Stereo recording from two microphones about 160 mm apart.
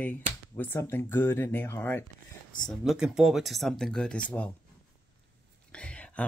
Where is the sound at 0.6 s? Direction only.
15° left (ahead or behind).